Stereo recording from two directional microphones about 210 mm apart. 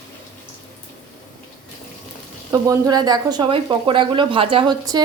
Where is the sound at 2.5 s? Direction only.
15° right (ahead or behind).